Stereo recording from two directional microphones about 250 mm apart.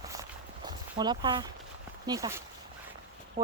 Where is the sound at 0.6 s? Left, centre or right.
Centre.